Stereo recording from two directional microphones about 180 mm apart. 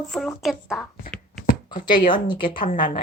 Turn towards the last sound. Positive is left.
turn(degrees=45)  # may be behind; listen again after turning